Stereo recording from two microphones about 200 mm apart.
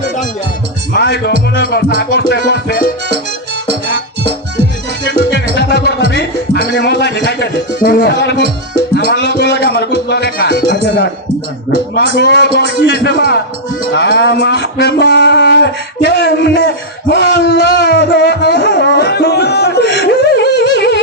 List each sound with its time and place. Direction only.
0.9 s music: 60° left (ahead or behind)
1.5 s speech: 55° left (ahead or behind)
5.5 s music: 55° left (ahead or behind)
6.1 s speech: 55° left (ahead or behind)
12.3 s speech: 55° left (ahead or behind)